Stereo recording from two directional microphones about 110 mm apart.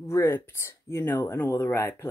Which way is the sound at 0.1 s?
20° left (ahead or behind).